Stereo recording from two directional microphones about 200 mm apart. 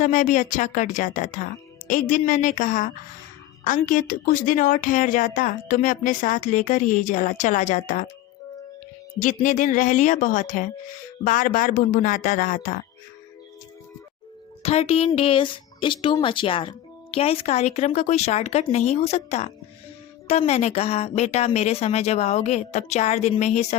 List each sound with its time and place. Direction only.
0.0 s speech: 40° left (ahead or behind)
9.2 s speech: 40° left (ahead or behind)
14.6 s speech: 30° left (ahead or behind)